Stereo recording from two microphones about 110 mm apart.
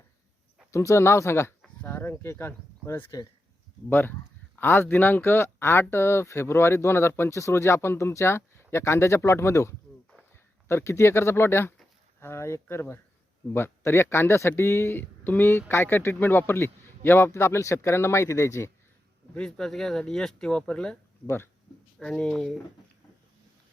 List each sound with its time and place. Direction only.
0.7 s speech: 25° left (ahead or behind)
19.3 s speech: 5° left (ahead or behind)
21.2 s speech: 20° left (ahead or behind)
21.9 s speech: 5° left (ahead or behind)